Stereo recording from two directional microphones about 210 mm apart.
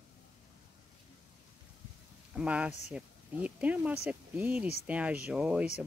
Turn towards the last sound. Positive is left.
turn(degrees=-5)  # may be behind; listen again after turning